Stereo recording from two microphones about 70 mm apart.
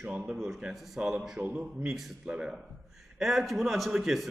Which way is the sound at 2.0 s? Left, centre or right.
Centre.